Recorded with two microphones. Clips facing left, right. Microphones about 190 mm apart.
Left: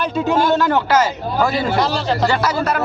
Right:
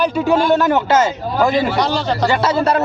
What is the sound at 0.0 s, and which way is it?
Speech, 15° right (ahead or behind).